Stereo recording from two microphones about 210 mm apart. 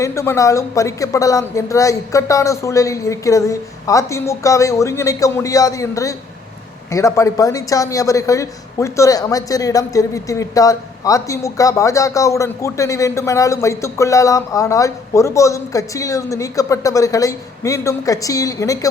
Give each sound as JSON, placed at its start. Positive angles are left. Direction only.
{"t": 0.0, "sound": "speech", "side_deg": 15}